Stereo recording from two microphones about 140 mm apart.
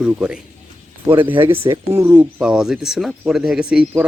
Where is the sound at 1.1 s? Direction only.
40° right (ahead or behind).